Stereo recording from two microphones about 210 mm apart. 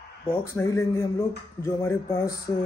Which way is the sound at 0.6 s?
15° left (ahead or behind).